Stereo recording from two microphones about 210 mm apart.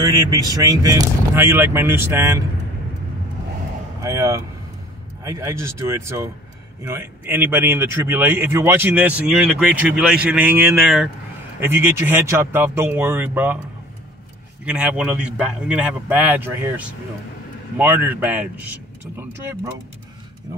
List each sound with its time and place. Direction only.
0.0 s speech: 15° right (ahead or behind)
4.0 s speech: 15° right (ahead or behind)
14.6 s speech: 5° right (ahead or behind)